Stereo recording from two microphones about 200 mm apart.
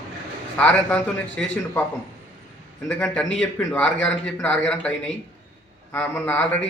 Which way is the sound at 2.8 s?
5° left (ahead or behind).